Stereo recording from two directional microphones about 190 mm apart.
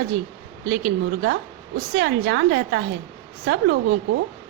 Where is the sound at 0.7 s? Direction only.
60° right (ahead or behind).